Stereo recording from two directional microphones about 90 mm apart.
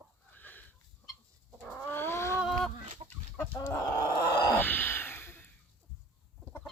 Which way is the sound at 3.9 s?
50° left (ahead or behind).